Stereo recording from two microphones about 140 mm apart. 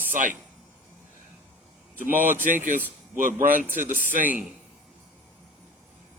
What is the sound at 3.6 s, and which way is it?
Speech, 15° right (ahead or behind).